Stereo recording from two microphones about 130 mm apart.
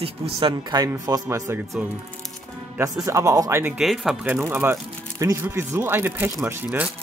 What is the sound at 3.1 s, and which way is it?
Speech, 25° right (ahead or behind).